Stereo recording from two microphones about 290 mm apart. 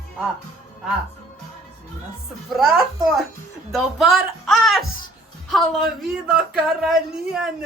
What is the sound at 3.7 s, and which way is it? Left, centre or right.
Speech, centre.